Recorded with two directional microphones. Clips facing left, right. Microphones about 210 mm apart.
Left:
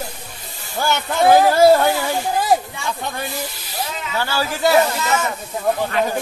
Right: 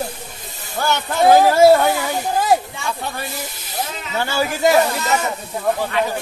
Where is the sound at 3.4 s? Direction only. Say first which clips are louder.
Right 1 dB; 20° right (ahead or behind).